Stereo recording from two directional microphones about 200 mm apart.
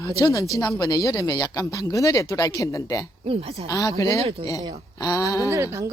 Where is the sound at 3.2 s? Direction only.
30° right (ahead or behind).